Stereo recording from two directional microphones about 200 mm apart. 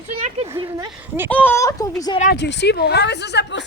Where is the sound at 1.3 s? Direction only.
10° left (ahead or behind).